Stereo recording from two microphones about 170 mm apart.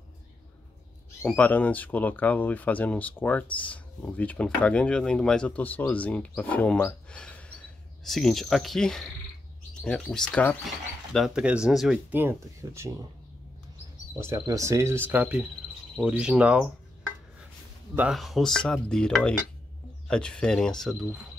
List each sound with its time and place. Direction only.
1.2 s speech: 10° left (ahead or behind); by 12.9 s 15° right (ahead or behind)
14.1 s speech: 15° right (ahead or behind)
17.9 s speech: 5° right (ahead or behind)